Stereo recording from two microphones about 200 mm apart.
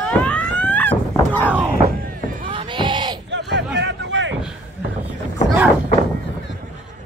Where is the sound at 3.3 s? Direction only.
60° right (ahead or behind).